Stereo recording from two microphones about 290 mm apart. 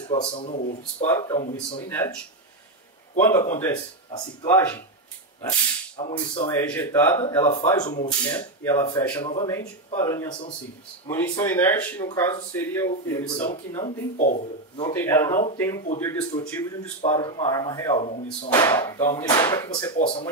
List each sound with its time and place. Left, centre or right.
0.1 s speech: centre
3.2 s speech: centre
5.4 s a sound: centre
6.5 s speech: centre
14.1 s speech: left
14.9 s speech: centre
17.0 s speech: centre